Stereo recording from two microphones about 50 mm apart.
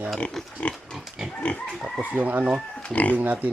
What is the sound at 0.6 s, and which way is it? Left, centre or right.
Speech, left.